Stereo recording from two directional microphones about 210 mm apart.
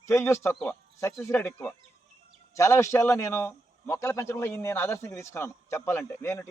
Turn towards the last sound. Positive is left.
turn(degrees=10)  # may be behind; listen again after turning